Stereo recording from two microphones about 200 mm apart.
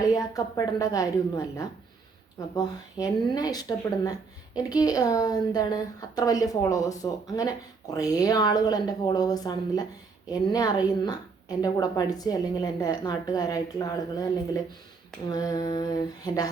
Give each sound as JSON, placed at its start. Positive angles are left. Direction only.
{"t": 0.0, "sound": "a woman's voice", "side_deg": 20}
{"t": 15.3, "sound": "speech", "side_deg": 20}